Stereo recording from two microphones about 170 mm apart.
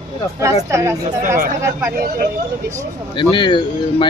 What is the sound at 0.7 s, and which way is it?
Speech, 15° right (ahead or behind).